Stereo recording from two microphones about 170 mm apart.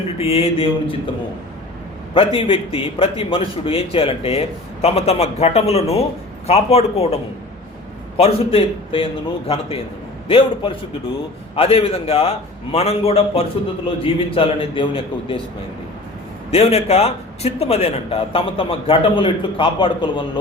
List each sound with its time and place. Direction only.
0.2 s a man's voice: 35° left (ahead or behind)
2.1 s a man's voice: 30° left (ahead or behind)
8.2 s a man's voice: 35° left (ahead or behind)
16.5 s a man's voice: 35° left (ahead or behind)